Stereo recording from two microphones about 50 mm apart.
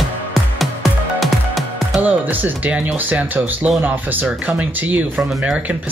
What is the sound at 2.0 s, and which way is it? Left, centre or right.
Music, right.